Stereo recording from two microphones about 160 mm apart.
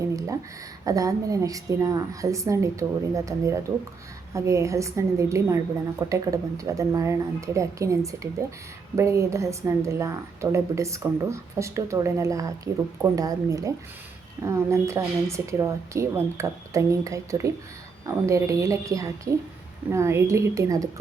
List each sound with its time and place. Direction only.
0.9 s a woman's voice: 20° right (ahead or behind)